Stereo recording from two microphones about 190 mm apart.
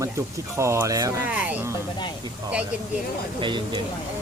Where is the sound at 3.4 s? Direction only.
25° right (ahead or behind).